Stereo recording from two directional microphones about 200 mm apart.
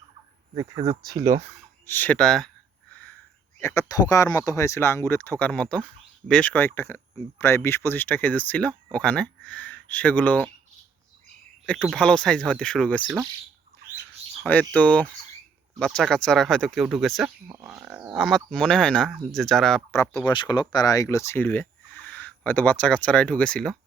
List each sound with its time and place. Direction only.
0.5 s speech: 15° right (ahead or behind)
1.9 s speech: 10° left (ahead or behind)
3.6 s speech: 15° left (ahead or behind)
11.6 s speech: 5° left (ahead or behind)
14.4 s speech: 5° left (ahead or behind)
17.5 s speech: 15° right (ahead or behind); by 20.0 s 5° left (ahead or behind)
20.0 s speech: 20° left (ahead or behind)